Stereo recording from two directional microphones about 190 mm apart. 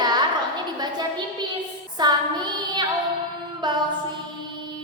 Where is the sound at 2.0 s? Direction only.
20° right (ahead or behind).